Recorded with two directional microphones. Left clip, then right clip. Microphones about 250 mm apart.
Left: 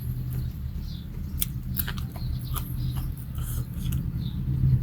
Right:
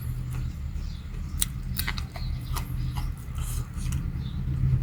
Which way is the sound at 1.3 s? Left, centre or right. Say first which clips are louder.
Right 4 dB; centre.